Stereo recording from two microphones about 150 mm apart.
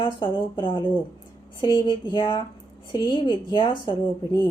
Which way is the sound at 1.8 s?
30° left (ahead or behind).